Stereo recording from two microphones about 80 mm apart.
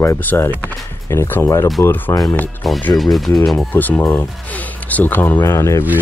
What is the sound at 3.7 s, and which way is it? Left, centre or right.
Speech, left.